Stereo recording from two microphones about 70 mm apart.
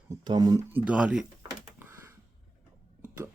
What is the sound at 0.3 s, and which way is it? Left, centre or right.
Speech, right.